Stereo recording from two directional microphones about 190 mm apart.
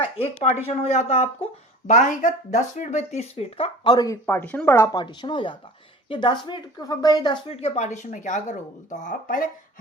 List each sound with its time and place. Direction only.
0.8 s speech: 35° left (ahead or behind)
3.8 s speech: 20° left (ahead or behind)
7.5 s speech: 35° left (ahead or behind)